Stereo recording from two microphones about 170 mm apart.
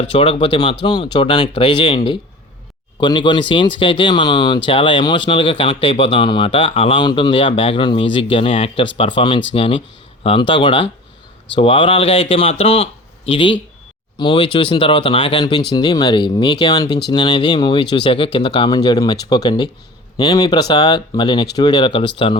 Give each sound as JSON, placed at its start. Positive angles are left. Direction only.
{"t": 0.0, "sound": "speech", "side_deg": 35}